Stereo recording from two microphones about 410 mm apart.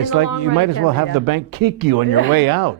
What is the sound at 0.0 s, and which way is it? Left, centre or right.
Speech, right.